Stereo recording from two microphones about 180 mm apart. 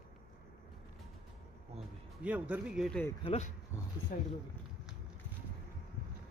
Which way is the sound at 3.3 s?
40° left (ahead or behind).